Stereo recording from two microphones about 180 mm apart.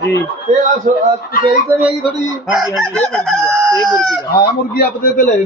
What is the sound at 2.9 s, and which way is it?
Speech, 10° left (ahead or behind).